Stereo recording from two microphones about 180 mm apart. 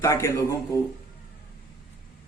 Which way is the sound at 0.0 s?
15° left (ahead or behind).